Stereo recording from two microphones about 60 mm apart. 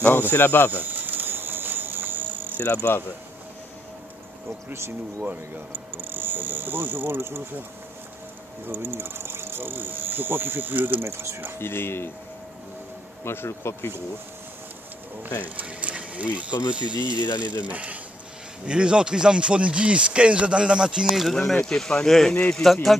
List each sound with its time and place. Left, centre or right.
0.1 s speech: left
0.7 s cricket: right
2.6 s speech: left
4.6 s speech: right
5.9 s speech: right
8.6 s speech: right
11.0 s speech: right
11.6 s speech: left
13.2 s speech: left
15.4 s speech: right
21.1 s speech: centre
21.4 s speech: centre